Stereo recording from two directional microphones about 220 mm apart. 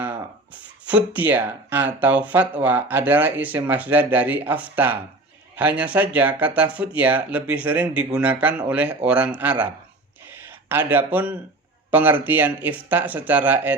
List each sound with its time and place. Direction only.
0.9 s speech: 5° right (ahead or behind)
10.2 s a sound: 10° right (ahead or behind)
11.9 s speech: 10° right (ahead or behind)